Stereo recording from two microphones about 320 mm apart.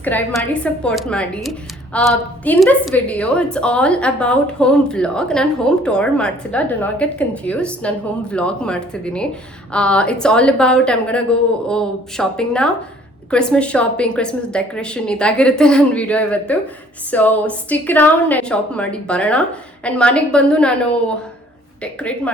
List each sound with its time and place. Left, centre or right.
0.0 s a woman's voice: centre